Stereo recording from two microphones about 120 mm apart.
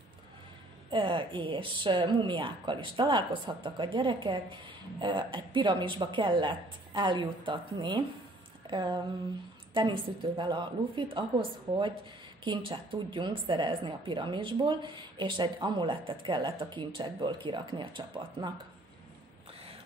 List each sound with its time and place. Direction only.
0.8 s a woman's voice: 45° right (ahead or behind)
8.6 s a sound: 40° right (ahead or behind)
9.8 s a woman's voice: 40° right (ahead or behind)